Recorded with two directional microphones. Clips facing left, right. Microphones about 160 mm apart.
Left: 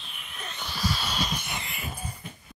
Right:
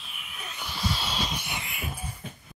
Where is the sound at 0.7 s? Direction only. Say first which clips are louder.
Left 1 dB; 25° right (ahead or behind).